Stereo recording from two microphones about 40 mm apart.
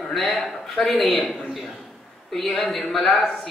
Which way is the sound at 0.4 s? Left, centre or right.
Centre.